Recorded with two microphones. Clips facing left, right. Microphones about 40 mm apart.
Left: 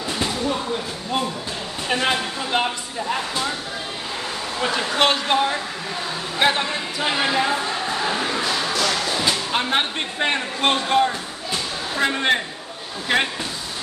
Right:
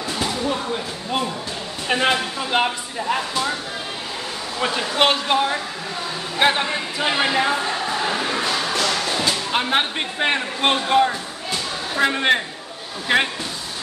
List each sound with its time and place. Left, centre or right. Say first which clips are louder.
1.9 s a man's voice: right 2 dB; centre
4.6 s a man's voice: right 1 dB; centre
8.4 s a sound: right 1 dB; right
9.5 s a man's voice: right 1 dB; centre